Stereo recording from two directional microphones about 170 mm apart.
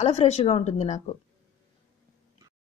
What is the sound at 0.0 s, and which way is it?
Speech, 40° left (ahead or behind).